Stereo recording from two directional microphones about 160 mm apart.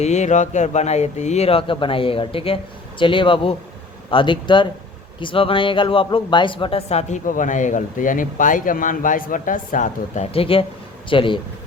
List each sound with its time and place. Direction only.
0.0 s speech: 45° left (ahead or behind)
10.3 s speech: 35° left (ahead or behind)